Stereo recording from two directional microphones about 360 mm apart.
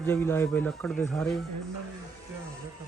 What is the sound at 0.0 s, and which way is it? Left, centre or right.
Speech, centre.